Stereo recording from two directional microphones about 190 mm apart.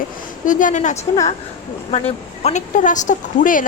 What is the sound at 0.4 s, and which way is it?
A woman's voice, 45° left (ahead or behind).